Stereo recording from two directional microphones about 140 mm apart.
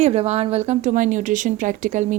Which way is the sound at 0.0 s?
50° right (ahead or behind).